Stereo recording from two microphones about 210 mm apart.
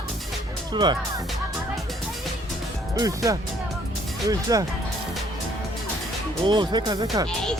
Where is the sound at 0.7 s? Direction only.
20° right (ahead or behind).